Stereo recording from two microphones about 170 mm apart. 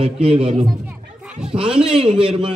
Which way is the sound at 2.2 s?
30° right (ahead or behind).